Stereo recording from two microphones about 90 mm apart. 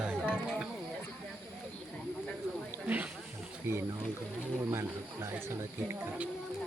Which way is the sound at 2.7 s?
20° right (ahead or behind).